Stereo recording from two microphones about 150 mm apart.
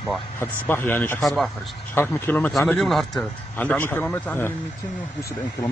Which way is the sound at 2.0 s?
15° left (ahead or behind).